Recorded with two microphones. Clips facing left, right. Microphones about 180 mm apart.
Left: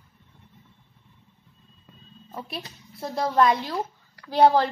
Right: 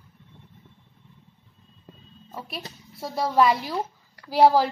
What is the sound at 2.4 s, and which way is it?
A woman's voice, 5° right (ahead or behind).